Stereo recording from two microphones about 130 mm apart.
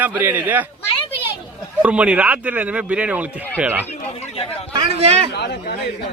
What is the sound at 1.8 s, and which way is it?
Speech, 10° right (ahead or behind).